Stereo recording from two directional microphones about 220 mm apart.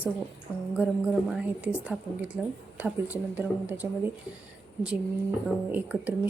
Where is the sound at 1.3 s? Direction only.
5° right (ahead or behind).